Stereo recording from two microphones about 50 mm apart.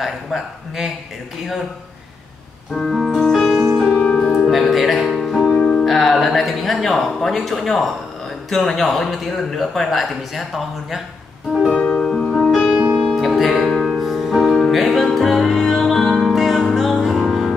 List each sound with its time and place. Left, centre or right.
0.0 s a man's voice: centre
2.7 s a man's voice: centre
3.2 s music: centre
3.9 s music: left
4.4 s music: centre
5.6 s music: centre
5.9 s a man's voice: centre
11.9 s music: centre
12.4 s music: centre
12.7 s music: right
13.4 s music: centre